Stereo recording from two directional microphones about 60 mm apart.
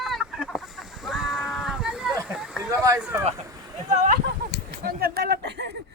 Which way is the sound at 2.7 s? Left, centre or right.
Right.